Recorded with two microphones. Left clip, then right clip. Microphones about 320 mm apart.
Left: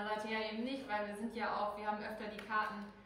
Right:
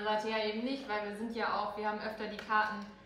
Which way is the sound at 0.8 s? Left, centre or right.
Centre.